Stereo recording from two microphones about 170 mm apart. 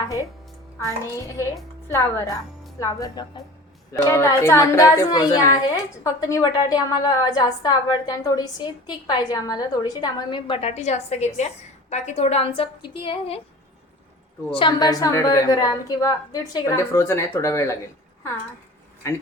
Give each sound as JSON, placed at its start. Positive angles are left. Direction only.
{"t": 0.9, "sound": "a woman's voice", "side_deg": 20}
{"t": 14.5, "sound": "a woman's voice", "side_deg": 25}